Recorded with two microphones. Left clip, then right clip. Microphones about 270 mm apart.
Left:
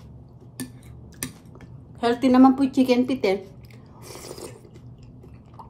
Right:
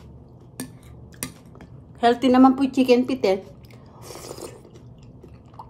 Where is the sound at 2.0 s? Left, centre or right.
Centre.